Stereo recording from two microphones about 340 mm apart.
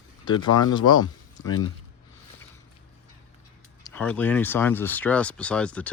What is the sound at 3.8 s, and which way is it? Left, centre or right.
Speech, centre.